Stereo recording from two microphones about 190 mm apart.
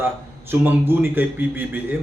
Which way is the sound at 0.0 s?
10° right (ahead or behind).